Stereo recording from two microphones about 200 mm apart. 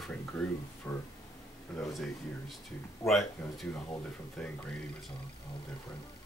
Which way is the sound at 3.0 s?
Centre (ahead or behind).